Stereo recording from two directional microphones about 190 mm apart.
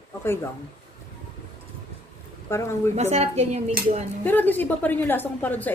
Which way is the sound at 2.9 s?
35° right (ahead or behind).